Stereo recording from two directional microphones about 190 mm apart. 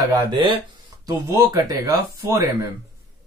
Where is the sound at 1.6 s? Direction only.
15° right (ahead or behind).